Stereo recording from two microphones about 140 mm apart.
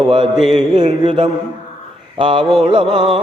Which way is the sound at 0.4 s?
35° right (ahead or behind).